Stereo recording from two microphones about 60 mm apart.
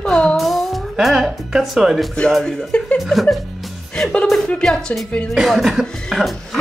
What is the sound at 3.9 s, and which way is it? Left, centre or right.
Music, centre.